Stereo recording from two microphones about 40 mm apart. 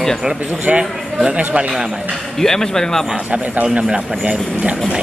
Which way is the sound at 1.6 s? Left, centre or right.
Centre.